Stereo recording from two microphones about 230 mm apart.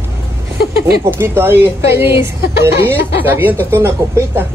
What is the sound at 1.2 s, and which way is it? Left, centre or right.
A woman's voice, centre.